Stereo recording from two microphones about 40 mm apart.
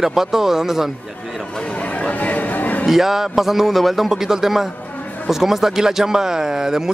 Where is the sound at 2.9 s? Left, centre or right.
Centre.